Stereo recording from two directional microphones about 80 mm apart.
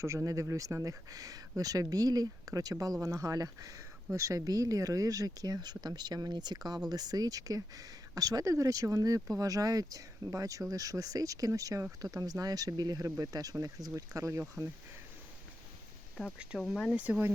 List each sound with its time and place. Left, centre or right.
0.0 s speech: right
16.2 s speech: centre
16.9 s speech: centre